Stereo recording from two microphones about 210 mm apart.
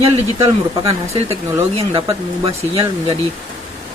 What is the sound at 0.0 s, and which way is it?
Speech, 30° right (ahead or behind).